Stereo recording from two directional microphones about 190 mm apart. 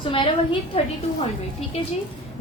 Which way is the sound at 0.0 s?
25° left (ahead or behind).